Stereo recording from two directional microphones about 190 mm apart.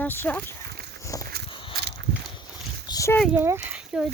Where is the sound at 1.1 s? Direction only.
15° left (ahead or behind).